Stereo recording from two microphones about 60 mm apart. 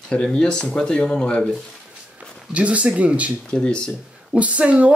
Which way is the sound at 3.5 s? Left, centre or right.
Centre.